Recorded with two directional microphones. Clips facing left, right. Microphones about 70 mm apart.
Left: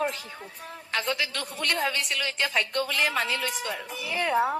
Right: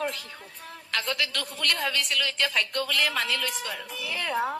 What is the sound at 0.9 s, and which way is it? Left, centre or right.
A woman's voice, centre.